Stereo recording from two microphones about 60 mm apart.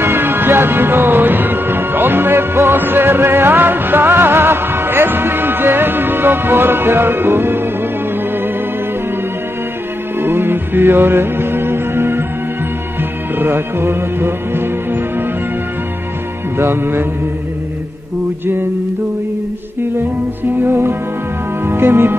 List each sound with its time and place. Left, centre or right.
0.0 s music: right
10.1 s music: right
13.4 s music: right
16.5 s speech: right
20.6 s music: right
21.6 s speech: right